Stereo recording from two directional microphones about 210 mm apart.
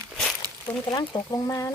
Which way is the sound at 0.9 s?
20° left (ahead or behind).